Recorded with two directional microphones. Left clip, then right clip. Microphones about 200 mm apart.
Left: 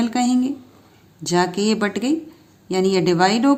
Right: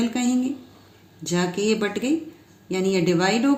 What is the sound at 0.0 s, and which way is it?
Speech, 50° left (ahead or behind).